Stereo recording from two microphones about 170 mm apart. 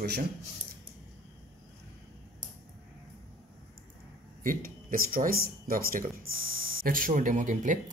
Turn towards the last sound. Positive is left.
turn(degrees=-50)  # may be behind; listen again after turning